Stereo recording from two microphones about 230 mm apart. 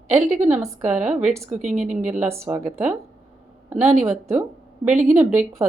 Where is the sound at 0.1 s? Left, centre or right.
Centre.